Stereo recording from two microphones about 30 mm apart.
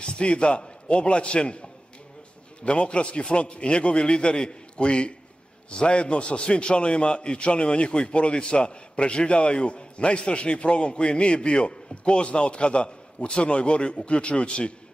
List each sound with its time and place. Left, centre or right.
0.0 s a man's voice: left